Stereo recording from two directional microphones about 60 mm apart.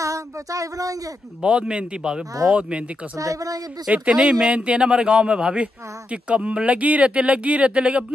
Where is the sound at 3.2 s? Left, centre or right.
Right.